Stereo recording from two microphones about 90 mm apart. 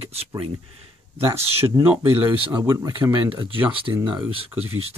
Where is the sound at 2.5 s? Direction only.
45° right (ahead or behind).